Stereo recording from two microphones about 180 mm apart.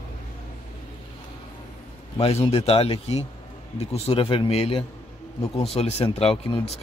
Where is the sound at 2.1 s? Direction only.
30° left (ahead or behind).